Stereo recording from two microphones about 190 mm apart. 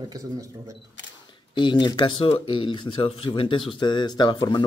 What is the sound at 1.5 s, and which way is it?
Speech, 25° left (ahead or behind).